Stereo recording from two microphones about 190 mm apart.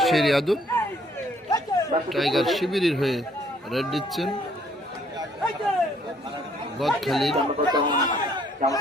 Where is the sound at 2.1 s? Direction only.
Centre (ahead or behind).